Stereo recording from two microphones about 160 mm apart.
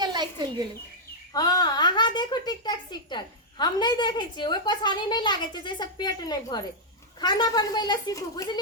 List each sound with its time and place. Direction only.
0.0 s bird: 25° right (ahead or behind)
1.3 s a woman's voice: 25° left (ahead or behind)